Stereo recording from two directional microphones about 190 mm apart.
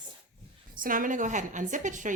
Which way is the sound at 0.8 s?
45° right (ahead or behind).